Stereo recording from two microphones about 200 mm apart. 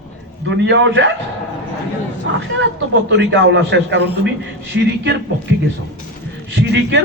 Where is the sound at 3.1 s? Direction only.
65° right (ahead or behind).